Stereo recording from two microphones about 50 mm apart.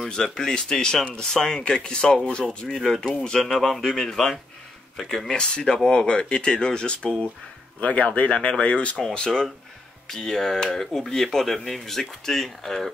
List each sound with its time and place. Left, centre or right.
0.1 s speech: centre